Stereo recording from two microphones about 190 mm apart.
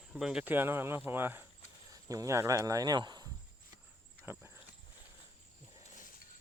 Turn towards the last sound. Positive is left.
turn(degrees=45)  # may be behind; listen again after turning